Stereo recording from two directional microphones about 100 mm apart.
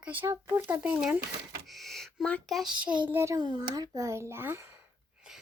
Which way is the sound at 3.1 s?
25° right (ahead or behind).